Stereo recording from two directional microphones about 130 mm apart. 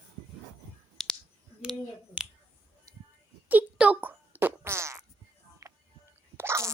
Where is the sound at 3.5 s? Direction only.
10° right (ahead or behind).